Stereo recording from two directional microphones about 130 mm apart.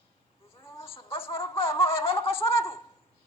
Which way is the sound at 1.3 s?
45° left (ahead or behind).